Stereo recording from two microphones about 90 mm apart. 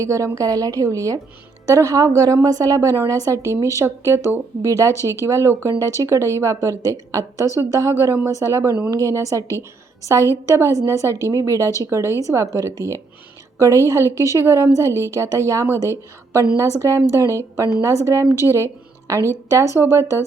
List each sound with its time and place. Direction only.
0.0 s a woman's voice: 35° right (ahead or behind)
9.5 s a woman's voice: 35° left (ahead or behind)
10.4 s a woman's voice: 35° right (ahead or behind)